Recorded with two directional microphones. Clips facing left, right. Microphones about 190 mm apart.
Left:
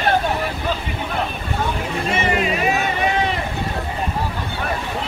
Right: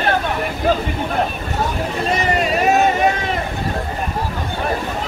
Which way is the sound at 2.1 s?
40° right (ahead or behind).